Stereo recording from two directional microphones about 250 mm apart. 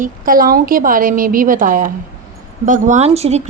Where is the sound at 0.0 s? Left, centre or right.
Right.